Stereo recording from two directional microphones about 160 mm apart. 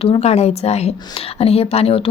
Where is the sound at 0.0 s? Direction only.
40° left (ahead or behind).